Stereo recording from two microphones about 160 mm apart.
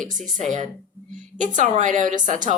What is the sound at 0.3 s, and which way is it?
A woman's voice, 50° right (ahead or behind).